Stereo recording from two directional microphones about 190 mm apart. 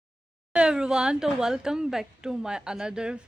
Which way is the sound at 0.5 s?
5° right (ahead or behind).